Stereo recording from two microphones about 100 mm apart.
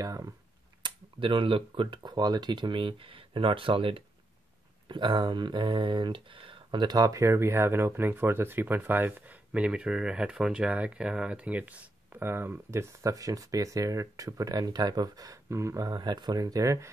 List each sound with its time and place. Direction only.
0.0 s speech: 35° right (ahead or behind)
0.8 s speech: 55° right (ahead or behind); by 16.9 s 35° right (ahead or behind)